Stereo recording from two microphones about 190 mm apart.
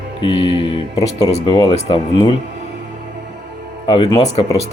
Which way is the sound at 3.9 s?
30° left (ahead or behind).